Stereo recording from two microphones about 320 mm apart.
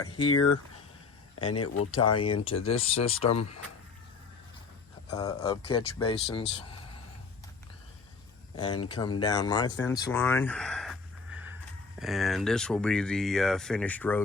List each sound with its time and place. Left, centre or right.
0.3 s speech: left
1.8 s speech: centre
5.1 s speech: centre
8.5 s speech: centre
11.9 s speech: centre